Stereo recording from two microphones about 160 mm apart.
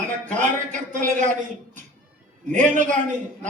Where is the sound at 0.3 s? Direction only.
50° right (ahead or behind).